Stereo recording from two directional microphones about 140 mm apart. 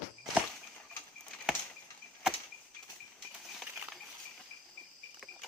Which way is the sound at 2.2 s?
5° right (ahead or behind).